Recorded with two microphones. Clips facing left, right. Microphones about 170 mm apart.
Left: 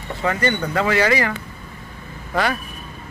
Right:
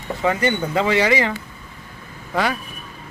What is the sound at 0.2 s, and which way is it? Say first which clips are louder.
Speech: right 1 dB; 15° right (ahead or behind).